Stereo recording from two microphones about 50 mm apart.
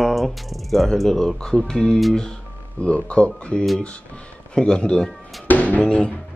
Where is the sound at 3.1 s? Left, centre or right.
Left.